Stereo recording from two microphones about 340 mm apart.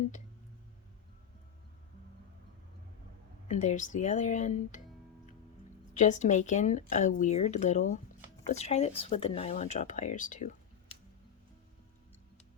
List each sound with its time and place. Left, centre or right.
3.5 s speech: left
5.9 s speech: left